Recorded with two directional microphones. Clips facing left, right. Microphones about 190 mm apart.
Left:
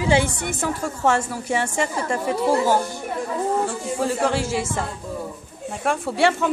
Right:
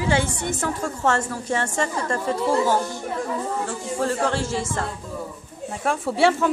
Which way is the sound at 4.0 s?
10° left (ahead or behind).